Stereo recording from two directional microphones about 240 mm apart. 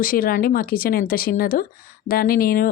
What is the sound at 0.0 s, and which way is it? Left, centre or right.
Speech, left.